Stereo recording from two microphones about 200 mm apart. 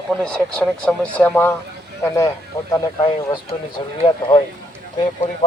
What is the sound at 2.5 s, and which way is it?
A man's voice, 15° left (ahead or behind).